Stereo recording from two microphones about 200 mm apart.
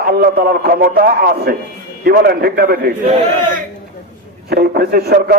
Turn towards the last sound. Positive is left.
turn(degrees=-50)  # may be behind; listen again after turning